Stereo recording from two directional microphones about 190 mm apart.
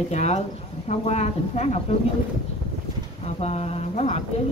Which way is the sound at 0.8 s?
35° left (ahead or behind).